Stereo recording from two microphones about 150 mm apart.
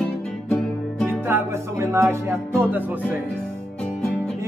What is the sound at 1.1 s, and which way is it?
Music, 15° right (ahead or behind).